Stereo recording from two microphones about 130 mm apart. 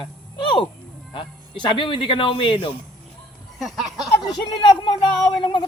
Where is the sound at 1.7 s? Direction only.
40° left (ahead or behind).